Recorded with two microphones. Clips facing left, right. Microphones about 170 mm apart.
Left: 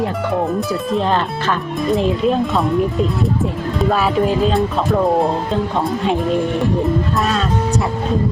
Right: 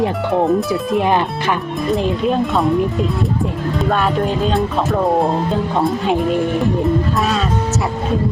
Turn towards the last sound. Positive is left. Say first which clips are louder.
# even
turn(degrees=0)  # may be behind; listen again after turning